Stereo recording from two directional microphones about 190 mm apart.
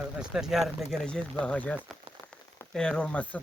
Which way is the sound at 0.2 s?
5° right (ahead or behind).